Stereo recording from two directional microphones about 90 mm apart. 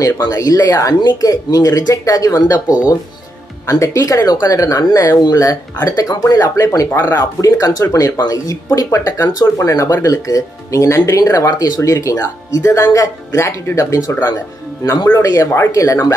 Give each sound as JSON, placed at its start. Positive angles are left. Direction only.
{"t": 0.0, "sound": "speech", "side_deg": 40}
{"t": 6.9, "sound": "speech", "side_deg": 25}
{"t": 7.2, "sound": "speech", "side_deg": 40}
{"t": 15.1, "sound": "speech", "side_deg": 35}